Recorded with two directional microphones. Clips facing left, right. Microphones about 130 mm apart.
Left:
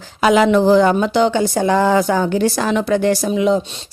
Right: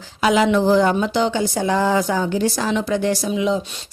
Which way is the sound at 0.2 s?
55° left (ahead or behind).